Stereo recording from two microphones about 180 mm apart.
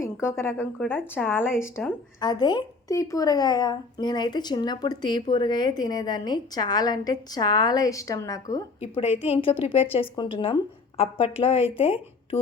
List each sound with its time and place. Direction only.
0.0 s speech: 15° left (ahead or behind)
8.8 s a woman's voice: 30° left (ahead or behind)